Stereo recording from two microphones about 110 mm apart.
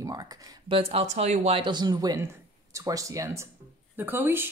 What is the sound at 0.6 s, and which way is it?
Speech, 60° right (ahead or behind).